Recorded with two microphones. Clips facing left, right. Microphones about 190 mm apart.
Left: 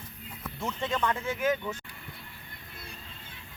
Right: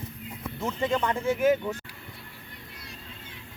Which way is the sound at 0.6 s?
5° right (ahead or behind).